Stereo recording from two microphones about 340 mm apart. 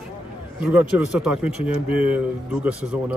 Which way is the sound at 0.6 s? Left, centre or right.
Centre.